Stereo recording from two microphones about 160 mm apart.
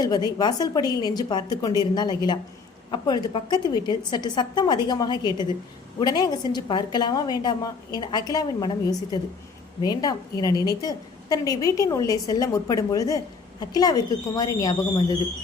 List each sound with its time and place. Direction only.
0.3 s a woman's voice: 25° left (ahead or behind)